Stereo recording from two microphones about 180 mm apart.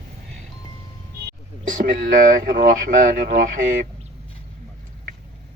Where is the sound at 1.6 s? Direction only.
45° right (ahead or behind).